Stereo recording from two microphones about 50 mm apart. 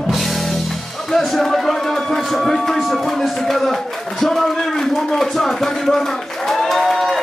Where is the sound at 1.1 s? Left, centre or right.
Centre.